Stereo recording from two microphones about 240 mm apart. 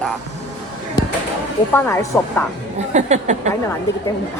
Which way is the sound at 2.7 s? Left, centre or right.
Right.